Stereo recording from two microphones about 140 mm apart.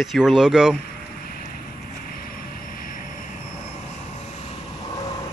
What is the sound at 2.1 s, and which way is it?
Vehicle, 90° left.